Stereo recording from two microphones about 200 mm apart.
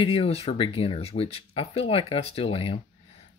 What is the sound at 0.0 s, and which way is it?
Speech, 30° left (ahead or behind).